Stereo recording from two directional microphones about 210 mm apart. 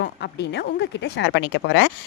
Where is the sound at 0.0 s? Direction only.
55° left (ahead or behind).